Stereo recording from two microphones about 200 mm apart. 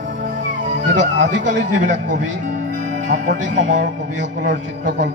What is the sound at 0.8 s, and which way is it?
Speech, 65° right (ahead or behind).